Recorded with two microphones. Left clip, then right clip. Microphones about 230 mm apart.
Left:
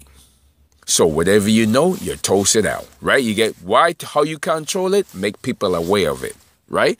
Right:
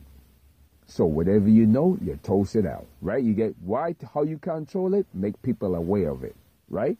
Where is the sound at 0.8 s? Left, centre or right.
Left.